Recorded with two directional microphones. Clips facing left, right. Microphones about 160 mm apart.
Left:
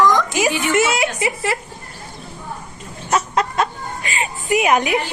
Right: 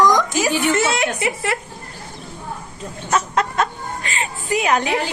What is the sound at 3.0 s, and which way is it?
Chicken, 5° left (ahead or behind).